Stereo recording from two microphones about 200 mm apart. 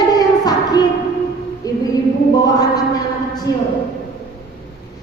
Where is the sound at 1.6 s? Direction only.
15° left (ahead or behind).